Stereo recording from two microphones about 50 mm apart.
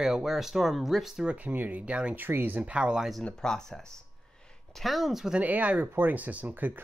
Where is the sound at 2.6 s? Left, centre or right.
Right.